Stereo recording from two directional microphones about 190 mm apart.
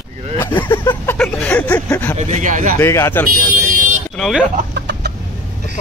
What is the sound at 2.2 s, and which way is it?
Speech, 40° right (ahead or behind).